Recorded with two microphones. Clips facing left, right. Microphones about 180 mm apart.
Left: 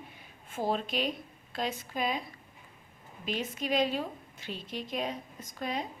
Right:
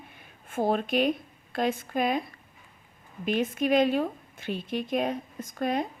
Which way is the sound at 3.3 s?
55° right (ahead or behind).